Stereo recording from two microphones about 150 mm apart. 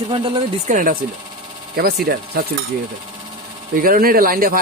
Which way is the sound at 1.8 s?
80° right.